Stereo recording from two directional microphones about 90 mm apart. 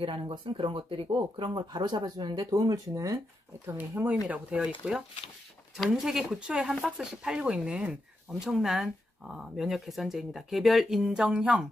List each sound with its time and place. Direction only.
0.0 s speech: 85° right; by 3.2 s 40° right (ahead or behind)
3.6 s speech: 25° right (ahead or behind)
4.3 s speech: 15° right (ahead or behind)
5.9 s speech: 5° right (ahead or behind)